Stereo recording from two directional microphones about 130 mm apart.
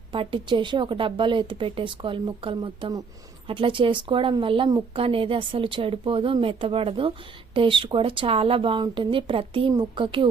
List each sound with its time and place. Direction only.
0.1 s a woman's voice: 40° right (ahead or behind)